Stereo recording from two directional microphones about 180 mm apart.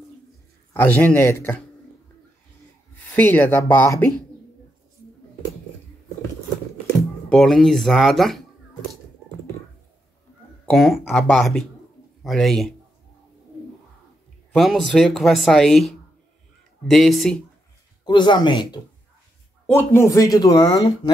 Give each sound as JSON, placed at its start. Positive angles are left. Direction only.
{"t": 0.7, "sound": "speech", "side_deg": 10}
{"t": 3.2, "sound": "speech", "side_deg": 10}
{"t": 7.2, "sound": "speech", "side_deg": 0}
{"t": 10.6, "sound": "speech", "side_deg": 5}
{"t": 14.5, "sound": "speech", "side_deg": 0}
{"t": 18.0, "sound": "speech", "side_deg": 25}
{"t": 19.6, "sound": "speech", "side_deg": 15}